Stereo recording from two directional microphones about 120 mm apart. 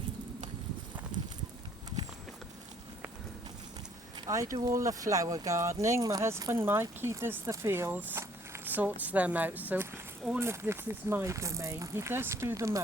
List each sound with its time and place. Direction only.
4.3 s speech: 30° right (ahead or behind)